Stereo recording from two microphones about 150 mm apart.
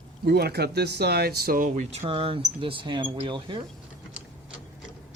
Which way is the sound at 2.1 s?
35° right (ahead or behind).